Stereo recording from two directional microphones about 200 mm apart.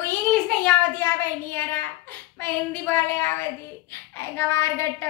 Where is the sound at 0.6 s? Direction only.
5° left (ahead or behind).